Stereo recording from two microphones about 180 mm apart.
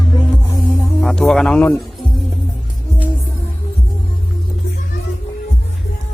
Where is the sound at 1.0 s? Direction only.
Centre (ahead or behind).